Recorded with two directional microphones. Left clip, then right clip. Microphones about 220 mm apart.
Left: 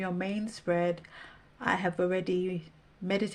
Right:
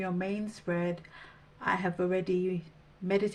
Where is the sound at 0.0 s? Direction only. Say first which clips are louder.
Even; 45° left (ahead or behind).